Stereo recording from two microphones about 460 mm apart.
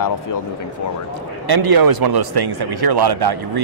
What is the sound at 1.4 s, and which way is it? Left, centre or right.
Speech, right.